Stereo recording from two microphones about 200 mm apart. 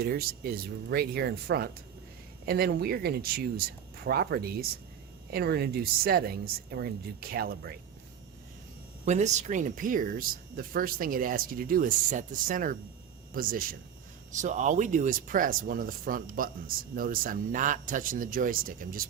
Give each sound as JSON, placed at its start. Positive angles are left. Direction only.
{"t": 0.0, "sound": "speech", "side_deg": -50}
{"t": 9.0, "sound": "speech", "side_deg": -35}